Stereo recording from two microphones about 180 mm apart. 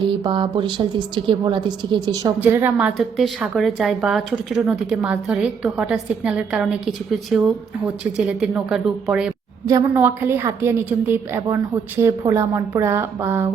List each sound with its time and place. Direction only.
0.2 s a woman's voice: 25° right (ahead or behind)
2.4 s a woman's voice: 10° right (ahead or behind)
9.6 s a woman's voice: 15° right (ahead or behind)